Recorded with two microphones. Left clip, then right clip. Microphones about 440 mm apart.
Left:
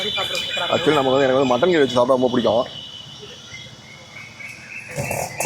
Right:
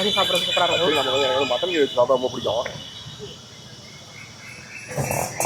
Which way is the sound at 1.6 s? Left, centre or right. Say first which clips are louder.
Left 3 dB; left.